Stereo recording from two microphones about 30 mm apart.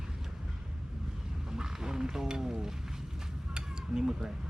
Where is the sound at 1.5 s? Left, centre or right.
Right.